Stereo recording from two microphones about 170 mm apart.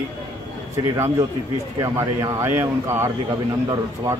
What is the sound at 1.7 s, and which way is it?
A man's voice, 20° right (ahead or behind).